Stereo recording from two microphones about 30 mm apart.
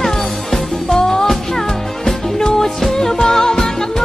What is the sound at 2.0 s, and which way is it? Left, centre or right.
Music, centre.